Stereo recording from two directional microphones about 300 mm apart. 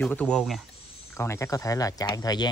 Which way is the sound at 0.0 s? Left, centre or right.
Centre.